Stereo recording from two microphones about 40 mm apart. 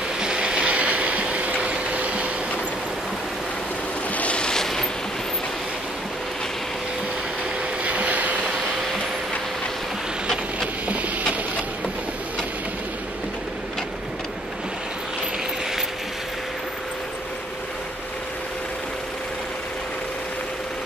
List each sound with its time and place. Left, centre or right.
0.2 s train: right
1.3 s vehicle: right
4.1 s waves: left
4.4 s a sound: centre
7.8 s vehicle: right
10.2 s a sound: centre